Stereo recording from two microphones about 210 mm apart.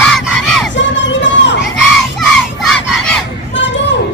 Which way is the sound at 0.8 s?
60° left (ahead or behind).